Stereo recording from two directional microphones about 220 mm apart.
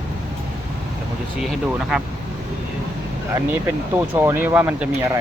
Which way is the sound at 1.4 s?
Centre (ahead or behind).